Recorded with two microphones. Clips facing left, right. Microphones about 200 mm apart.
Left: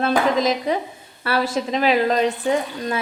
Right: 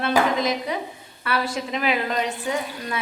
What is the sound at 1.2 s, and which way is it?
A woman's voice, 35° left (ahead or behind).